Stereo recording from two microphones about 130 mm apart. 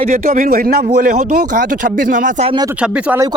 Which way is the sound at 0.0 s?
90° right.